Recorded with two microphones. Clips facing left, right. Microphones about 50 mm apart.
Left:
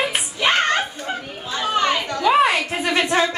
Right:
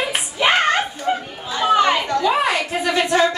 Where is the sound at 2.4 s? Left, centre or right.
Left.